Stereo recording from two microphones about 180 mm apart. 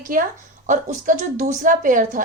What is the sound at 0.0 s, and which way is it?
Speech, 50° right (ahead or behind).